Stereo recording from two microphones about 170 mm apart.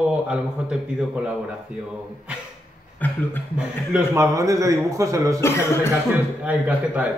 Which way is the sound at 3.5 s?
10° right (ahead or behind).